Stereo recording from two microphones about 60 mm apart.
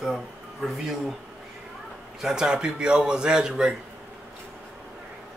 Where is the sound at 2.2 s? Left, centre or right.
Centre.